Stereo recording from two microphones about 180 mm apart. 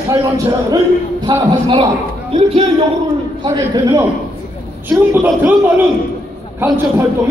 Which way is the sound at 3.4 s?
25° right (ahead or behind).